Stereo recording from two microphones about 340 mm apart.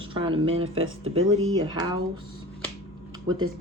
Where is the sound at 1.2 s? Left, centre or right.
Right.